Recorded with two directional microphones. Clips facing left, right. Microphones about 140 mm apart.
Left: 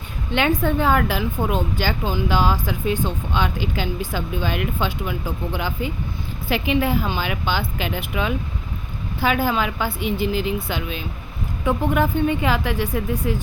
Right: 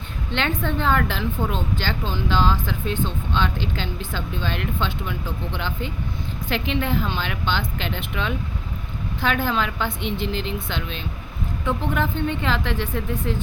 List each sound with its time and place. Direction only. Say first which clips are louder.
0.3 s speech: left 5 dB; 10° left (ahead or behind)